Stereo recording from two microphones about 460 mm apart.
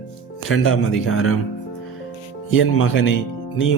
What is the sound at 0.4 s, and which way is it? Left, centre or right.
Speech, left.